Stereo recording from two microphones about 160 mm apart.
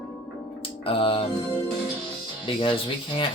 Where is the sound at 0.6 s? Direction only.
35° left (ahead or behind).